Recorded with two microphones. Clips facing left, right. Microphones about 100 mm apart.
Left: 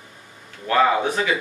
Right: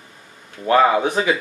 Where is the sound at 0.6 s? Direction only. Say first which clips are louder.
Right 3 dB; 25° right (ahead or behind).